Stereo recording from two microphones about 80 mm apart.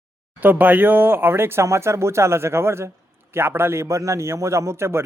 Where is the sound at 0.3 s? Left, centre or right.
Right.